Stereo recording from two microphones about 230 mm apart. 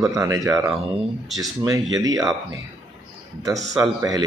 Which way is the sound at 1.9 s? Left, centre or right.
Centre.